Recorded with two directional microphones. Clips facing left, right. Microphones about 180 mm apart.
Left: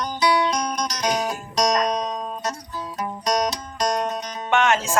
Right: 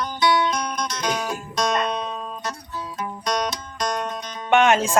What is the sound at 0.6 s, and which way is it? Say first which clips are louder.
Music: left 2 dB; 35° left (ahead or behind).